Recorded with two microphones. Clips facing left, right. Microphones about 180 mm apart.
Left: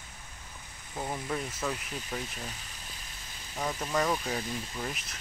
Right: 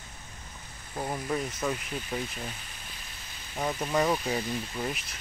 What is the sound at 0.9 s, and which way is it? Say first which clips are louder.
Speech: right 3 dB; 10° right (ahead or behind).